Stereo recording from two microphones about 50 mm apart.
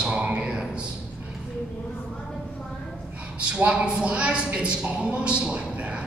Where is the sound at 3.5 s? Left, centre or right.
Right.